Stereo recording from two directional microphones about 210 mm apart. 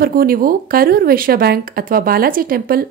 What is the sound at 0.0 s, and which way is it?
A woman's voice, 45° right (ahead or behind).